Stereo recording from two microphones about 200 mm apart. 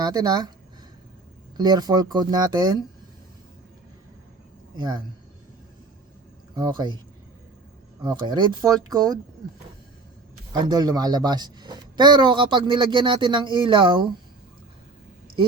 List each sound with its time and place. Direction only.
0.0 s a woman's voice: 20° right (ahead or behind)
1.5 s a woman's voice: 20° right (ahead or behind)
4.8 s a woman's voice: 20° right (ahead or behind)
6.6 s a woman's voice: 20° right (ahead or behind)
8.0 s a woman's voice: 20° right (ahead or behind)
10.5 s a woman's voice: 20° right (ahead or behind)